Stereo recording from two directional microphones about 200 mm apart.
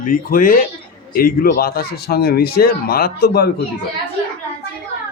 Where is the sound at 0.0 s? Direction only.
45° left (ahead or behind).